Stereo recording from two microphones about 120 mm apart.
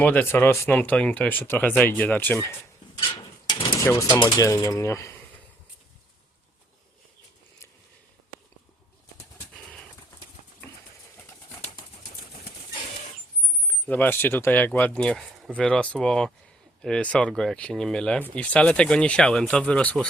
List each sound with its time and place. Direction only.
0.0 s speech: 15° left (ahead or behind)
3.4 s a sound: 45° left (ahead or behind)
3.8 s speech: 25° left (ahead or behind)
4.1 s speech: 40° left (ahead or behind)
4.4 s coin: 30° left (ahead or behind)
9.5 s bird: 10° left (ahead or behind)
13.8 s speech: 15° left (ahead or behind)